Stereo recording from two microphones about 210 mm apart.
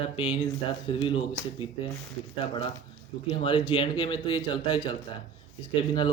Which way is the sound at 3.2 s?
25° left (ahead or behind).